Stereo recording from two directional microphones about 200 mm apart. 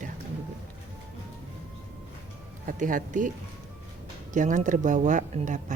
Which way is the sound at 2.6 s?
40° right (ahead or behind).